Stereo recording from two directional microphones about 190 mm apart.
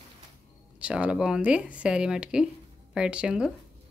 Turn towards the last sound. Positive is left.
turn(degrees=-5)  # may be behind; listen again after turning